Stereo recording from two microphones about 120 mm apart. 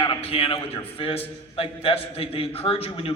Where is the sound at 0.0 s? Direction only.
50° left (ahead or behind).